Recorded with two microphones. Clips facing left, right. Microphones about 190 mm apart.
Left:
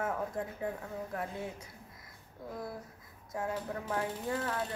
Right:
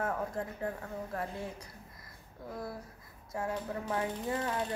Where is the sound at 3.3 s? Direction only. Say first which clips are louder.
Right 1 dB; 5° left (ahead or behind).